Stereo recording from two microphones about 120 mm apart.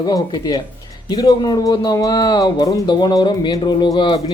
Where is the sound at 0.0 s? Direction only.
35° left (ahead or behind).